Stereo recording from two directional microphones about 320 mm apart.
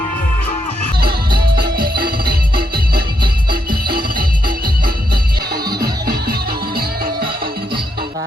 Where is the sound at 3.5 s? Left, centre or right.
Right.